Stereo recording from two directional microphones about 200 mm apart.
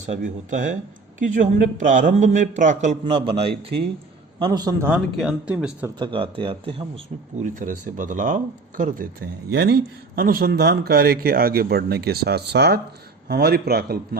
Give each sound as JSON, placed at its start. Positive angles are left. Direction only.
{"t": 0.0, "sound": "speech", "side_deg": -40}
{"t": 4.9, "sound": "speech", "side_deg": -5}
{"t": 6.0, "sound": "speech", "side_deg": -25}
{"t": 7.4, "sound": "speech", "side_deg": -40}